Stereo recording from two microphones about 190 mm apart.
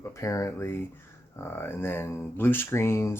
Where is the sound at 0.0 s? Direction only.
15° left (ahead or behind).